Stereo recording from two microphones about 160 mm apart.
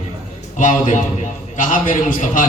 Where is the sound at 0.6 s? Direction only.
55° left (ahead or behind).